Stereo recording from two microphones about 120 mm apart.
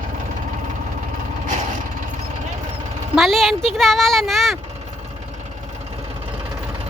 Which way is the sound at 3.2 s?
Centre (ahead or behind).